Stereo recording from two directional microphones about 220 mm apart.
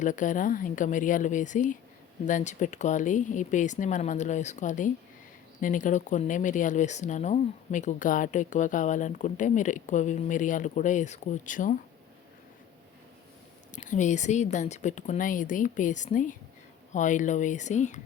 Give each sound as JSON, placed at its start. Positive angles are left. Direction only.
{"t": 0.0, "sound": "speech", "side_deg": 35}
{"t": 13.7, "sound": "speech", "side_deg": 35}